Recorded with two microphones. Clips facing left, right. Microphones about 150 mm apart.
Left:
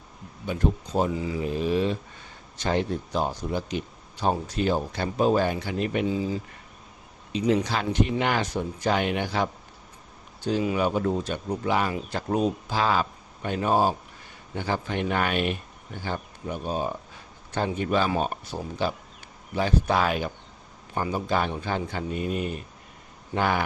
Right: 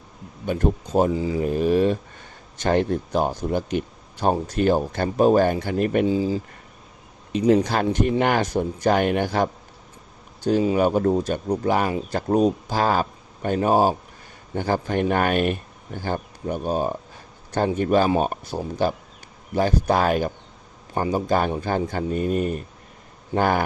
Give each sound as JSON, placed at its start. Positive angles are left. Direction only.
{"t": 0.4, "sound": "speech", "side_deg": -50}
{"t": 1.1, "sound": "speech", "side_deg": -30}
{"t": 1.4, "sound": "speech", "side_deg": -50}
{"t": 6.1, "sound": "speech", "side_deg": -30}
{"t": 7.3, "sound": "speech", "side_deg": -50}
{"t": 10.8, "sound": "speech", "side_deg": -45}